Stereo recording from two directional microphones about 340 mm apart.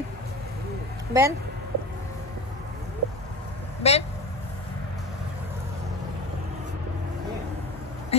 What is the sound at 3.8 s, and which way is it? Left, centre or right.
Speech, centre.